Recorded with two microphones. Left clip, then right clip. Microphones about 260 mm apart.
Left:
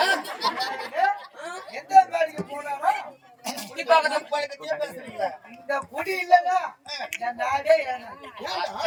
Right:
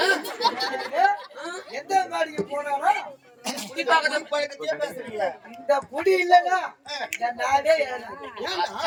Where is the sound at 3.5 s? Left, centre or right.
Centre.